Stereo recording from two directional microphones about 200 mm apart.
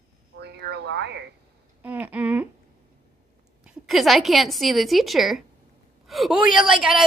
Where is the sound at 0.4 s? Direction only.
55° right (ahead or behind).